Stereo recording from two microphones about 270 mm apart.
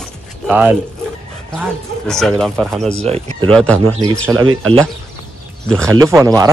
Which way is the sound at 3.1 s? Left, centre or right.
Right.